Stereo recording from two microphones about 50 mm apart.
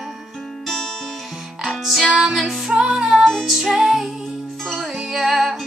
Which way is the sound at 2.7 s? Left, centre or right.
Centre.